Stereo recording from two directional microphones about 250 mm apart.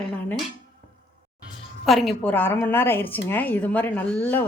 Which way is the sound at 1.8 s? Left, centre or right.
Centre.